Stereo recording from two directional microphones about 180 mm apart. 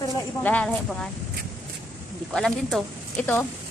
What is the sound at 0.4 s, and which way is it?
Speech, 10° left (ahead or behind).